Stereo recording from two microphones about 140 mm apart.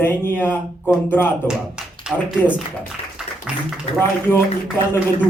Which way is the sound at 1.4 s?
5° right (ahead or behind).